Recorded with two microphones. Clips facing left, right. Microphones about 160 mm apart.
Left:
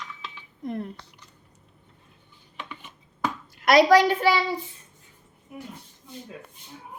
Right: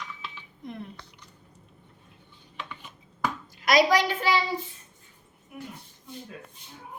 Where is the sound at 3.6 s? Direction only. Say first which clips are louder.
Left 4 dB; 60° left (ahead or behind).